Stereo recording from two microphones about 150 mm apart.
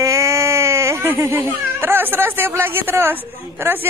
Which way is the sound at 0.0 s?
20° right (ahead or behind).